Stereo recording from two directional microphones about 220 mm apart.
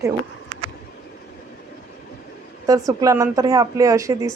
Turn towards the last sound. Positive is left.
turn(degrees=-15)  # may be behind; listen again after turning